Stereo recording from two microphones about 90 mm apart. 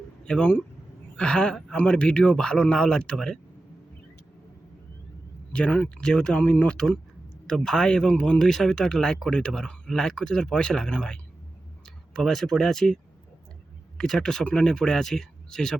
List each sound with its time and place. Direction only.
0.3 s speech: 15° left (ahead or behind)
5.5 s speech: 15° left (ahead or behind)
14.0 s speech: 5° left (ahead or behind)